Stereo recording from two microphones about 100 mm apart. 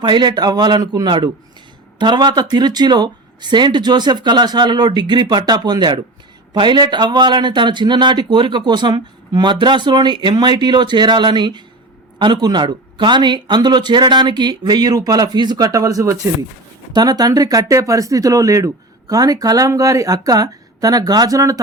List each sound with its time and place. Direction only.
0.0 s a man's voice: 50° right (ahead or behind)